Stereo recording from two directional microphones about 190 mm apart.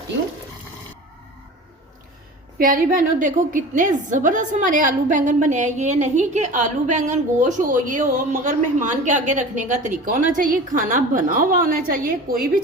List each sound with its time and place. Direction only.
2.6 s a woman's voice: 50° right (ahead or behind)